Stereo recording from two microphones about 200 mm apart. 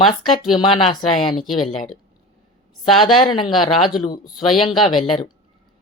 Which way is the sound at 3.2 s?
25° left (ahead or behind).